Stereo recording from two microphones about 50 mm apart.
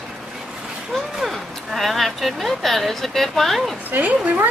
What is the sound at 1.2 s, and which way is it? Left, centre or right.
Speech, centre.